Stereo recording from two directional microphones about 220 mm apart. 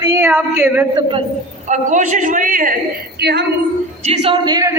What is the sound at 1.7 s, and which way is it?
A man's voice, 35° right (ahead or behind).